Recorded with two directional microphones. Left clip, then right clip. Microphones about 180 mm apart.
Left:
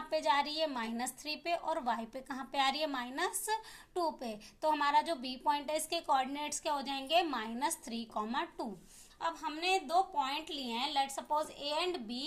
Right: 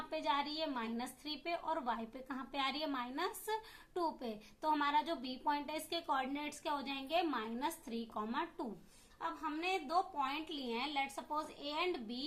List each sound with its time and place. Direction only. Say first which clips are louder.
0.1 s a woman's voice: left 6 dB; 35° left (ahead or behind)